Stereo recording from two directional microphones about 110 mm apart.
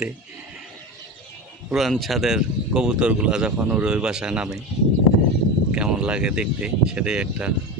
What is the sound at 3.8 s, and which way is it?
Speech, 5° right (ahead or behind).